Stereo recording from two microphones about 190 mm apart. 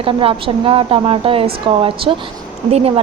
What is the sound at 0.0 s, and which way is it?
A woman's voice, 30° right (ahead or behind).